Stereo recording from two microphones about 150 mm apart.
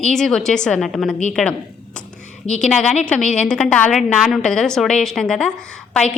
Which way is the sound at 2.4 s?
5° left (ahead or behind).